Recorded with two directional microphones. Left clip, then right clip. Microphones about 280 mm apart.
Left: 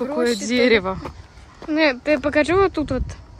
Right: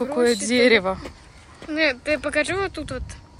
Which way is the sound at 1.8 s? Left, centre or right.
Left.